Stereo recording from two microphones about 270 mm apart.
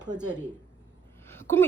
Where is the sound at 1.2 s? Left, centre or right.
Centre.